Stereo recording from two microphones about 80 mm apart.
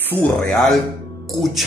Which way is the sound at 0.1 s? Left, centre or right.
Right.